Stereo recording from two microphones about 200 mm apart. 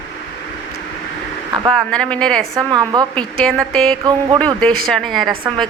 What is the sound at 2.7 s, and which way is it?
Speech, 20° right (ahead or behind).